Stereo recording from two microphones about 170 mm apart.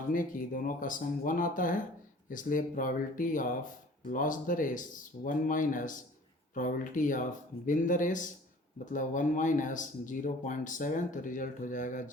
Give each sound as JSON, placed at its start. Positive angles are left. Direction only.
{"t": 0.1, "sound": "speech", "side_deg": 50}